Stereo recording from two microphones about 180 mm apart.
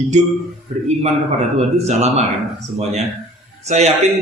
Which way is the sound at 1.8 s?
40° right (ahead or behind).